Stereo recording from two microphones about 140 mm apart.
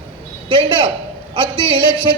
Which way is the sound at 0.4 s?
40° right (ahead or behind).